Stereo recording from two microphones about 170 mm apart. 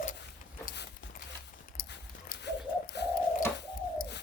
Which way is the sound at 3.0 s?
80° left.